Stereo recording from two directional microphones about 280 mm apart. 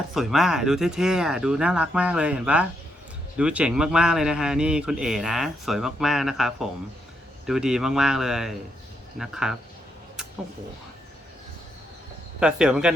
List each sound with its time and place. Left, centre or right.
0.1 s a man's voice: centre
12.4 s a man's voice: centre